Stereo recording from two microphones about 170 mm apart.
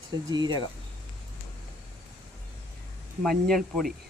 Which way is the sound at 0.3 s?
25° right (ahead or behind).